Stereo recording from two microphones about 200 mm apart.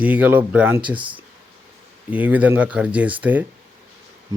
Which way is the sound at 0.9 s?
25° right (ahead or behind).